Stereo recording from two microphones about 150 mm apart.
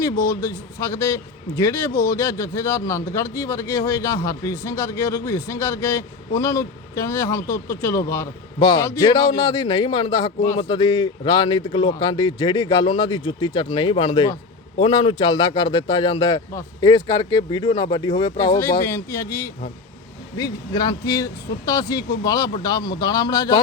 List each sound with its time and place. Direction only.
0.0 s a man's voice: 20° left (ahead or behind)